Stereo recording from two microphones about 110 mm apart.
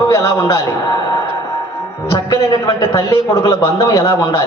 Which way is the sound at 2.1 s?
45° left (ahead or behind).